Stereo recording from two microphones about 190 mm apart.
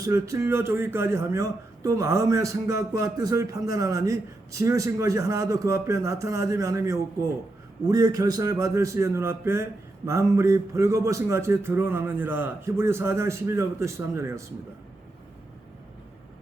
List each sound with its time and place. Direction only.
0.0 s a man's voice: 15° right (ahead or behind)